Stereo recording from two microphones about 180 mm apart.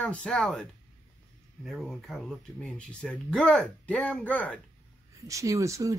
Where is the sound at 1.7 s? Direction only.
Centre (ahead or behind).